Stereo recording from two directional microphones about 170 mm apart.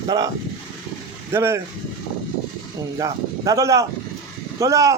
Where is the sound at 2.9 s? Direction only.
20° right (ahead or behind).